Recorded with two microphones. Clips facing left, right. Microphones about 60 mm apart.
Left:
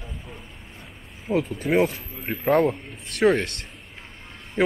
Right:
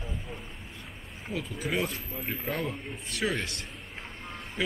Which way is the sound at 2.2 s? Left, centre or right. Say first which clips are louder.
Left 13 dB; left.